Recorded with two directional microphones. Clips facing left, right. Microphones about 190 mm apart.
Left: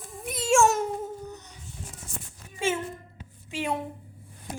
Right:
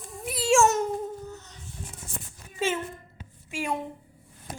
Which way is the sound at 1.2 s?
15° left (ahead or behind).